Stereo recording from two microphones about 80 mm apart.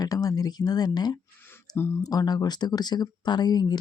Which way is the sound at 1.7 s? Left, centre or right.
Left.